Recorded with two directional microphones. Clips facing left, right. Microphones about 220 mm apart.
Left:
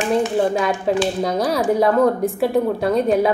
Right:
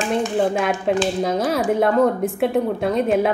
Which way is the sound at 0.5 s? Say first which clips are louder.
Left 1 dB; centre (ahead or behind).